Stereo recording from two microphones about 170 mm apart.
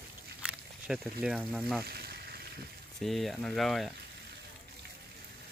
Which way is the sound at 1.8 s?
65° right (ahead or behind).